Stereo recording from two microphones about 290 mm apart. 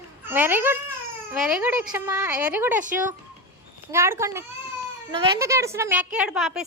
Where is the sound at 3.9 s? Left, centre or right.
Centre.